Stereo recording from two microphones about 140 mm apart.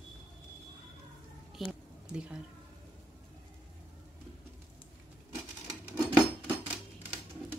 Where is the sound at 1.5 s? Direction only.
5° right (ahead or behind).